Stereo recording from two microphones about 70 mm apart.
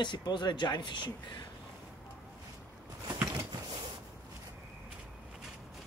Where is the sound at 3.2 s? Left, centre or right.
Right.